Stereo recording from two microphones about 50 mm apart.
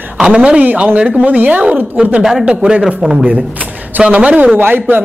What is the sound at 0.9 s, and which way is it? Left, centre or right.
Speech, right.